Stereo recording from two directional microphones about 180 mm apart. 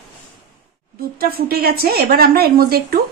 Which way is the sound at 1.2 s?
60° right (ahead or behind).